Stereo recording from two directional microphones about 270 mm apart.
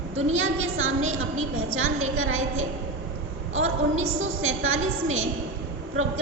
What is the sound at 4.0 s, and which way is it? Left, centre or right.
A woman's voice, right.